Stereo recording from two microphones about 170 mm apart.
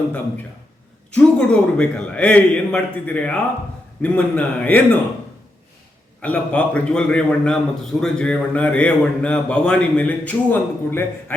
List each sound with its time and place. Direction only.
1.1 s speech: 5° left (ahead or behind)
6.2 s speech: 10° left (ahead or behind)